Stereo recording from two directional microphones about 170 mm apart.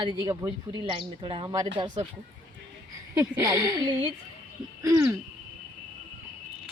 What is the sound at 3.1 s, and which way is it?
Speech, 20° right (ahead or behind).